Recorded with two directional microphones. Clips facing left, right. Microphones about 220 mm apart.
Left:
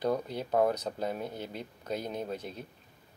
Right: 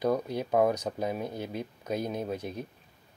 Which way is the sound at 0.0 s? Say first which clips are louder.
Right 3 dB; 10° right (ahead or behind).